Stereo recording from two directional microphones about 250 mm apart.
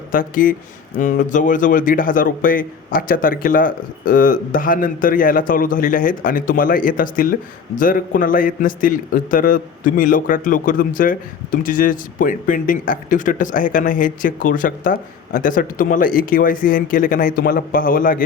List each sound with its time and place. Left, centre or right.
0.1 s a man's voice: left